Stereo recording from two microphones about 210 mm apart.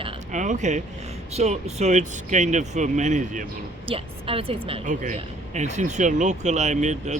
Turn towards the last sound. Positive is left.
turn(degrees=-35)  # may be behind; listen again after turning